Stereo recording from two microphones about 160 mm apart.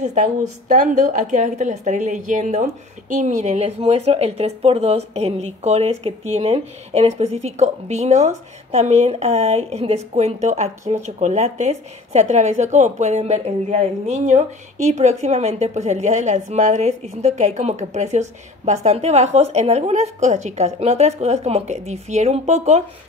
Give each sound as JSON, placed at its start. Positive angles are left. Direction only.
{"t": 0.0, "sound": "a woman's voice", "side_deg": -50}